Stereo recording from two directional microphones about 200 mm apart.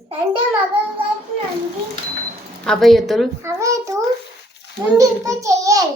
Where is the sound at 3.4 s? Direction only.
15° right (ahead or behind).